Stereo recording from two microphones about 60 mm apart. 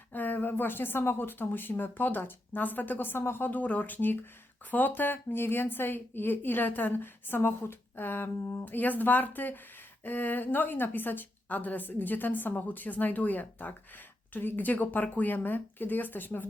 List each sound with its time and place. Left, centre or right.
0.1 s a woman's voice: left